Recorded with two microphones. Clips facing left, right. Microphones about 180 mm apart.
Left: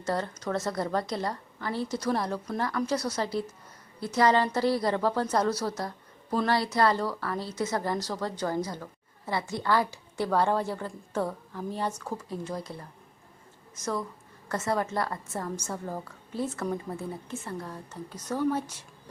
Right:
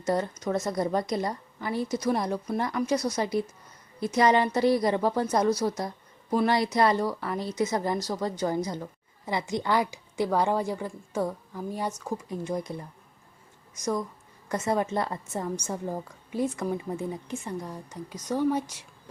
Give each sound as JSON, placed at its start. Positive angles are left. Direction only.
{"t": 0.0, "sound": "a woman's voice", "side_deg": -15}